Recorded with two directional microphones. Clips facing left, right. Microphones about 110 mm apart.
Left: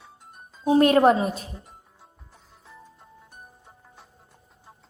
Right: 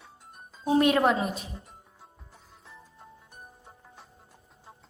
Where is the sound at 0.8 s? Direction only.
40° left (ahead or behind).